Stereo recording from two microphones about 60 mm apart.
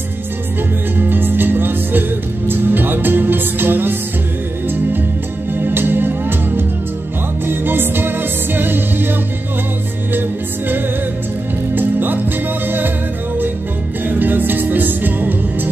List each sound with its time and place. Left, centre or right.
0.9 s music: right
5.6 s music: right
11.7 s music: right
14.0 s music: right